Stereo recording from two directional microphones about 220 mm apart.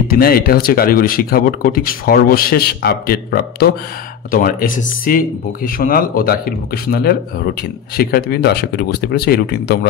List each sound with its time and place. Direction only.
0.1 s speech: 45° left (ahead or behind)